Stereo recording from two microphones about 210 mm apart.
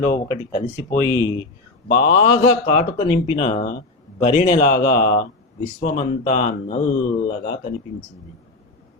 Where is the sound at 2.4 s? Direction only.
35° left (ahead or behind).